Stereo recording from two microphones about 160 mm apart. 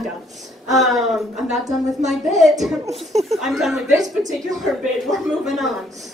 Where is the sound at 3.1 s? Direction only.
45° right (ahead or behind).